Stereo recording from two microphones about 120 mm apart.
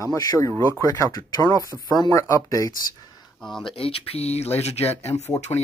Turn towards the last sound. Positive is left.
turn(degrees=65)  # may be behind; listen again after turning